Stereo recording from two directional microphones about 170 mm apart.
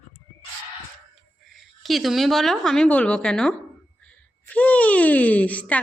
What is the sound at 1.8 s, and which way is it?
A woman's voice, centre (ahead or behind).